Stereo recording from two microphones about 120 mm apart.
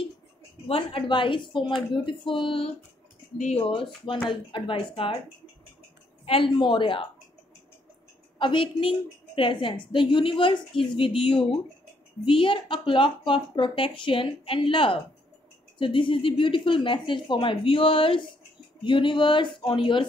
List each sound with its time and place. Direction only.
0.7 s a woman's voice: 50° left (ahead or behind)
3.3 s speech: 75° left (ahead or behind)
3.6 s a woman's voice: 45° left (ahead or behind)
6.2 s a woman's voice: 50° left (ahead or behind)
8.4 s a woman's voice: 45° left (ahead or behind)